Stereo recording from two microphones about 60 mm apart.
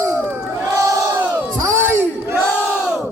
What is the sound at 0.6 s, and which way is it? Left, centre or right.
Battle cry, right.